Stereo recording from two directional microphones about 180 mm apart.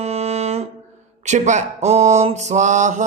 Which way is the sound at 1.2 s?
40° right (ahead or behind).